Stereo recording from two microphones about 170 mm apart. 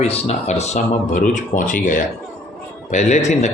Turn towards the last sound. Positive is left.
turn(degrees=45)  # may be behind; listen again after turning